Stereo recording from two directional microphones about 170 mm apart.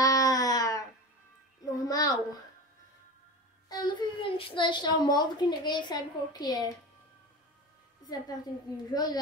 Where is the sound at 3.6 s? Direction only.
25° left (ahead or behind).